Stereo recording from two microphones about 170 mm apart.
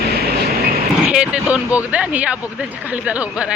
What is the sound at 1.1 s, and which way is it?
Speech, 5° right (ahead or behind).